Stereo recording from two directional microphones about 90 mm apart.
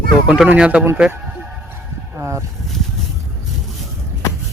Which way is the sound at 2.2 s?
30° right (ahead or behind).